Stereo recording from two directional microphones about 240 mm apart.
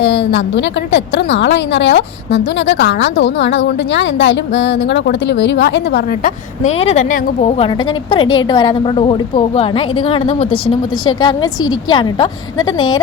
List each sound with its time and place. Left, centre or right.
0.0 s a woman's voice: left; by 13.0 s centre